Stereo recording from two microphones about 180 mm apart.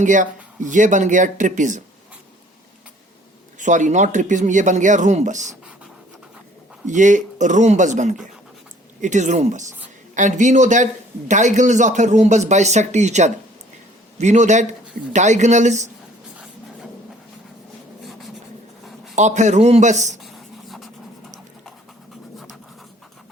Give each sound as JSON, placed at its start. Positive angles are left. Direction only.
{"t": 0.0, "sound": "speech", "side_deg": -45}
{"t": 3.6, "sound": "speech", "side_deg": -45}
{"t": 6.8, "sound": "speech", "side_deg": -45}
{"t": 18.0, "sound": "writing", "side_deg": 0}
{"t": 19.1, "sound": "speech", "side_deg": -40}
{"t": 20.2, "sound": "writing", "side_deg": 0}